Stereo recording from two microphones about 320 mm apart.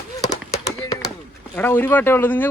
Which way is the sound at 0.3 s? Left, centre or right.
Centre.